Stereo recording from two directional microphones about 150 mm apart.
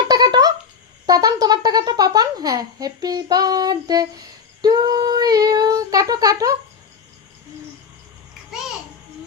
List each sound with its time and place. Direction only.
0.1 s a sound: 25° right (ahead or behind)
1.0 s speech: 25° right (ahead or behind)
4.6 s child singing: 25° right (ahead or behind)